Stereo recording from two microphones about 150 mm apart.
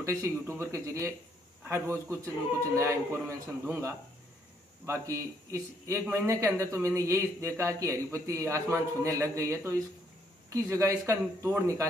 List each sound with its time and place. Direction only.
0.0 s a man's voice: 20° right (ahead or behind)